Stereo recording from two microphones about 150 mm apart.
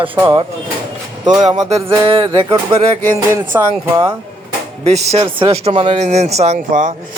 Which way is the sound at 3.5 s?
15° right (ahead or behind).